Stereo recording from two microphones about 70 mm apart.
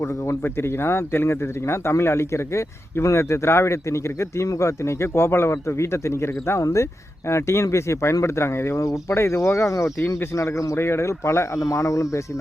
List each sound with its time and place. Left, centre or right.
0.0 s speech: left